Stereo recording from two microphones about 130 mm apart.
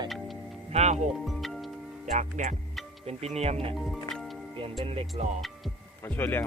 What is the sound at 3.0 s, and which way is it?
Music, 55° right (ahead or behind).